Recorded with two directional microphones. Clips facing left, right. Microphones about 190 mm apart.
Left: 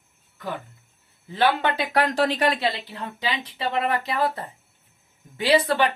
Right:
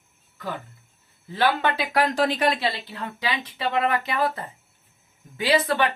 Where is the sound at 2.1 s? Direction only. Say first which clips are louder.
Even; 35° left (ahead or behind).